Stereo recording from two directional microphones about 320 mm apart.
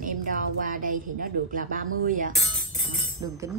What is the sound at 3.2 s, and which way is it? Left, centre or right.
Speech, centre.